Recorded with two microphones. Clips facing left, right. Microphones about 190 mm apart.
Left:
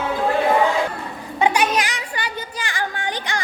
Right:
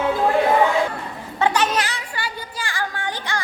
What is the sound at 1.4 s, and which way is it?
Speech, 10° left (ahead or behind).